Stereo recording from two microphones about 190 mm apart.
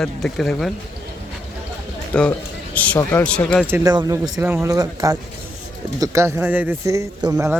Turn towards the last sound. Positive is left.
turn(degrees=-15)  # may be behind; listen again after turning